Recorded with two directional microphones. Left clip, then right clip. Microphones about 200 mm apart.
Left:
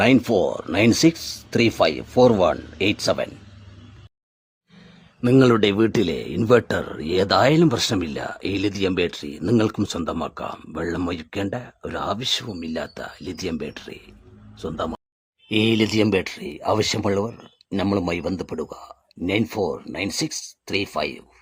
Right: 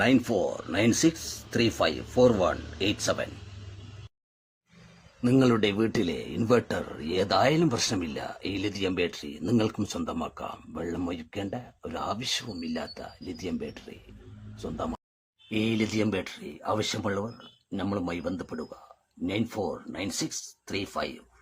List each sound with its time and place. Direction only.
0.0 s a man's voice: 35° left (ahead or behind)
5.2 s a man's voice: 35° left (ahead or behind)